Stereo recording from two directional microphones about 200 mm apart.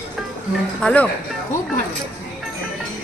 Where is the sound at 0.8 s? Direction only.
5° left (ahead or behind).